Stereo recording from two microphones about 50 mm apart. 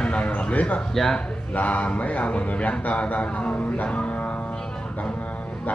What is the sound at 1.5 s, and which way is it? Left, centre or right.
Speech, left.